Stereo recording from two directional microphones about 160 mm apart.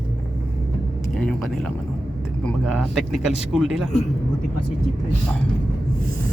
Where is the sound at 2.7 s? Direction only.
Centre (ahead or behind).